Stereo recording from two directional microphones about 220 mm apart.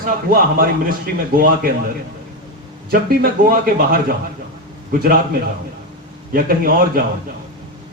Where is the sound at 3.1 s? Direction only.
40° right (ahead or behind).